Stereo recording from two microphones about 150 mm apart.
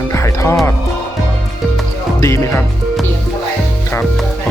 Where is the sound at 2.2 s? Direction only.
20° left (ahead or behind).